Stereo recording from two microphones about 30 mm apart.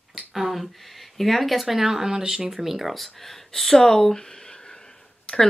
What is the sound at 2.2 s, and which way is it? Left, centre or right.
Speech, right.